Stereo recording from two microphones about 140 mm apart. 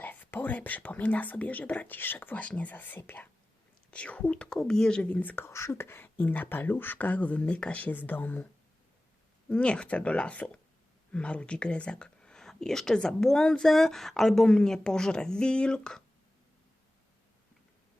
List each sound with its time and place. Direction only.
0.0 s speech: 10° left (ahead or behind)
9.5 s speech: 5° left (ahead or behind)